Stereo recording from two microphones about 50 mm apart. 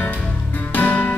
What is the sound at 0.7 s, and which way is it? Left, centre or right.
Music, left.